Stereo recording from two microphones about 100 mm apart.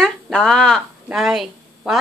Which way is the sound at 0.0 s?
5° left (ahead or behind).